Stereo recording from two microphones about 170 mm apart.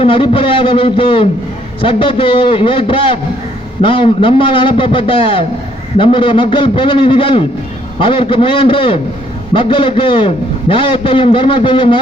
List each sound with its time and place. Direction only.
0.0 s a man's voice: 30° left (ahead or behind)